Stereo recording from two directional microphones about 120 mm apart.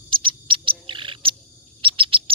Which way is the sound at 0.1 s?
45° right (ahead or behind).